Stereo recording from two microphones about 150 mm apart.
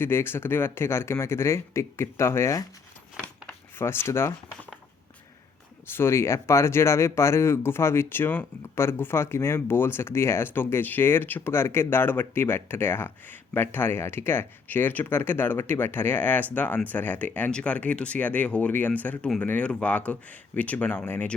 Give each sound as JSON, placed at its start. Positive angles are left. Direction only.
{"t": 0.0, "sound": "speech", "side_deg": 15}
{"t": 3.2, "sound": "a sound", "side_deg": -5}
{"t": 3.8, "sound": "speech", "side_deg": 15}
{"t": 5.9, "sound": "speech", "side_deg": 15}